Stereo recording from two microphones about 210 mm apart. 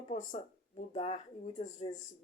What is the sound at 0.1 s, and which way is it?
Speech, 35° left (ahead or behind).